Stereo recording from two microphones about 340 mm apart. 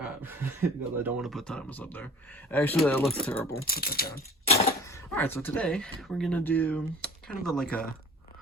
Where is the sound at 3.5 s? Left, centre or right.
Left.